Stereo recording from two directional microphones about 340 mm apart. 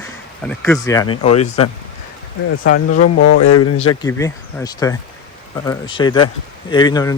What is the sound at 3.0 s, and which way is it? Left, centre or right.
Speech, left.